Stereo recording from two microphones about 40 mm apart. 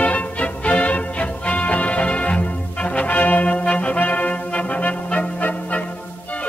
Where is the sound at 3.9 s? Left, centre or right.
Left.